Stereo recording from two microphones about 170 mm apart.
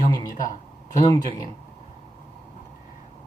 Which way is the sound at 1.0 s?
20° left (ahead or behind).